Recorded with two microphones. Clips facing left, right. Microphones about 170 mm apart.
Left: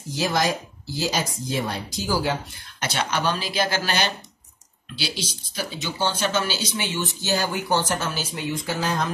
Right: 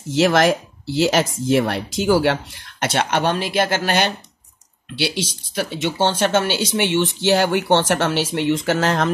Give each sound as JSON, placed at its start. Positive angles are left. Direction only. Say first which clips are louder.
{"t": 0.1, "sound": "speech", "louder": "right 8 dB", "side_deg": -80}